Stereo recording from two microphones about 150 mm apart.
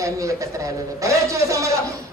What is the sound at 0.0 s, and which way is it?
A man's voice, 20° right (ahead or behind).